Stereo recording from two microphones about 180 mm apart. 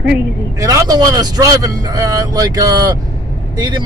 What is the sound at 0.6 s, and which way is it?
Speech, 20° right (ahead or behind).